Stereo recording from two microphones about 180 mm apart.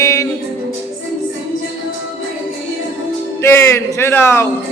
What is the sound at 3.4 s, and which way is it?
A man's voice, 15° left (ahead or behind).